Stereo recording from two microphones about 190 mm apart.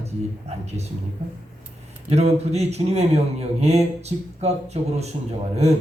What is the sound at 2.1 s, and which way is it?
A man's voice, 35° right (ahead or behind).